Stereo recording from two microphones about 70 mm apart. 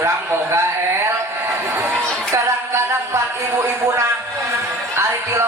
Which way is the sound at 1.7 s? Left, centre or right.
Right.